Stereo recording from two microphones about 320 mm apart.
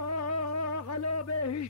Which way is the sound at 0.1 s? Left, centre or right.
Left.